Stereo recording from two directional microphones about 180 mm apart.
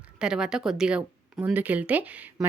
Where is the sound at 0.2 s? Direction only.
5° right (ahead or behind).